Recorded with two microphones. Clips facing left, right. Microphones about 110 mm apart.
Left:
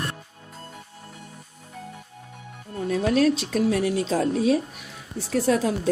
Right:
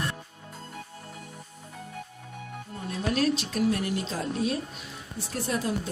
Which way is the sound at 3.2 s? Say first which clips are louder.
Left 4 dB; 90° left.